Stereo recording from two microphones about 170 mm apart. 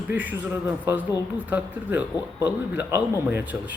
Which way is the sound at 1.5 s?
10° right (ahead or behind).